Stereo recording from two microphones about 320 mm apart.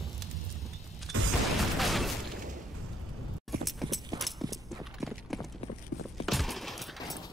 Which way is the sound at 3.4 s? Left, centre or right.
Centre.